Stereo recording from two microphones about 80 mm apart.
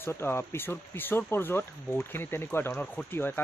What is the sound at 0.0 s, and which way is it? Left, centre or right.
A man's voice, left.